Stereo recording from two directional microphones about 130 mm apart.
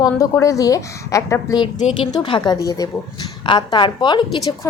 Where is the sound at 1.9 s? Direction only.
40° left (ahead or behind).